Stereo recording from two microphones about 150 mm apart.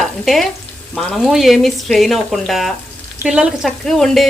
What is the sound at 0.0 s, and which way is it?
Stir, centre (ahead or behind).